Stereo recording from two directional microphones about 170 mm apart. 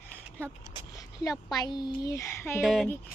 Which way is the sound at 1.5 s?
25° left (ahead or behind).